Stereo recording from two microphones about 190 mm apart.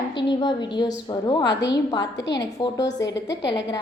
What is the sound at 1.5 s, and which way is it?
A woman's voice, 65° left (ahead or behind).